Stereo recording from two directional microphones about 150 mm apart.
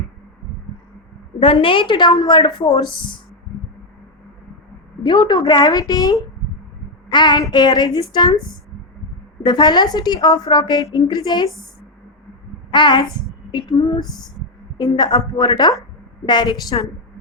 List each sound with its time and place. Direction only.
1.4 s a woman's voice: 35° left (ahead or behind)
5.0 s a woman's voice: 30° left (ahead or behind)
9.4 s a woman's voice: 30° left (ahead or behind)
12.7 s a woman's voice: 30° left (ahead or behind)